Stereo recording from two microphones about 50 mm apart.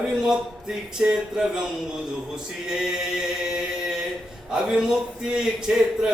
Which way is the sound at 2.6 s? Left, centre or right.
Centre.